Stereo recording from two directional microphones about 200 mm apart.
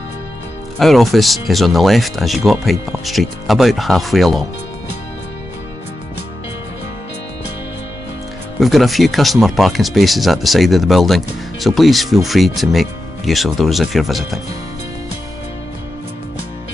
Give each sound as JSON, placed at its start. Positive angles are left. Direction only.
{"t": 0.7, "sound": "speech", "side_deg": 0}
{"t": 8.5, "sound": "speech", "side_deg": 0}